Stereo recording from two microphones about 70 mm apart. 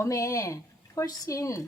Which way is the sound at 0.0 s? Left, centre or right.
Left.